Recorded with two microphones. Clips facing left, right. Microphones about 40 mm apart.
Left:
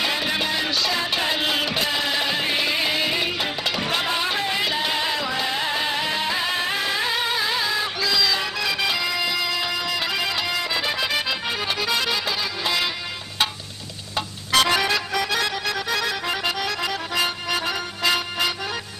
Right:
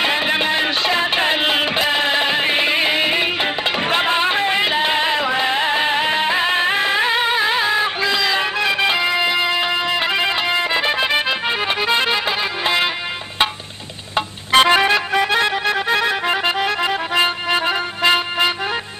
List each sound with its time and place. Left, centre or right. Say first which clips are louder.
0.0 s music: right 6 dB; right
14.1 s music: right 6 dB; right